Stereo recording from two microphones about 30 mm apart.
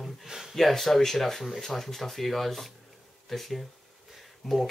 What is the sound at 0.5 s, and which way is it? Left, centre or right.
Speech, centre.